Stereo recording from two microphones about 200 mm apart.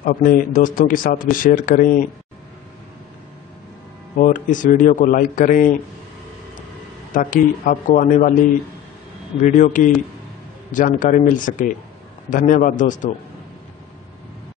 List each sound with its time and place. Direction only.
0.0 s speech: 45° left (ahead or behind)
4.2 s speech: 40° left (ahead or behind)
7.2 s speech: 40° left (ahead or behind)
9.4 s speech: 40° left (ahead or behind)